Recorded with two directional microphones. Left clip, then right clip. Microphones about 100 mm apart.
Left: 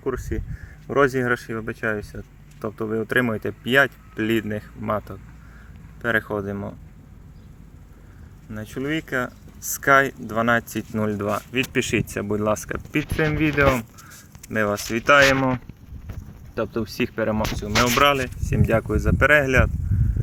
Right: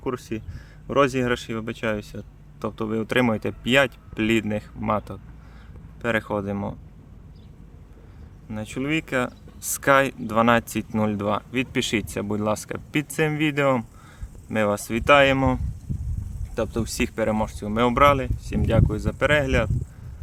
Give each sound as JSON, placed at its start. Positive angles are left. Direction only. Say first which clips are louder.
{"t": 0.0, "sound": "speech", "louder": "left 2 dB", "side_deg": 0}
{"t": 8.4, "sound": "speech", "louder": "even", "side_deg": -15}
{"t": 10.8, "sound": "speech", "louder": "even", "side_deg": -10}
{"t": 11.7, "sound": "speech", "louder": "left 2 dB", "side_deg": 10}
{"t": 13.0, "sound": "speech", "louder": "left 1 dB", "side_deg": 10}
{"t": 14.5, "sound": "speech", "louder": "even", "side_deg": -10}
{"t": 16.6, "sound": "speech", "louder": "left 1 dB", "side_deg": 5}
{"t": 18.3, "sound": "speech", "louder": "left 2 dB", "side_deg": 40}